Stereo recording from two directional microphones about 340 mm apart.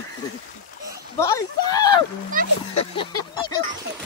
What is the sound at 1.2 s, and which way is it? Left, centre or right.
Speech, centre.